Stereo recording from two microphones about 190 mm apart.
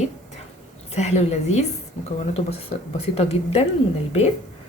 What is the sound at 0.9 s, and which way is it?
Speech, 35° left (ahead or behind).